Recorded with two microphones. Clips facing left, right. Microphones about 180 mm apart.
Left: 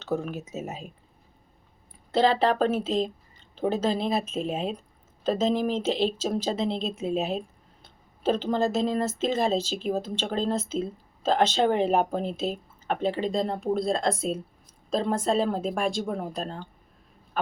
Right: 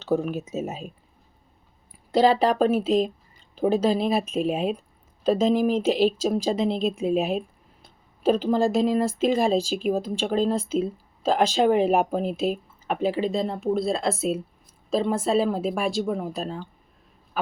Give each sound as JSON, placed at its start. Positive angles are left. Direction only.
{"t": 0.1, "sound": "speech", "side_deg": -15}
{"t": 2.1, "sound": "speech", "side_deg": -10}
{"t": 17.4, "sound": "a sound", "side_deg": -5}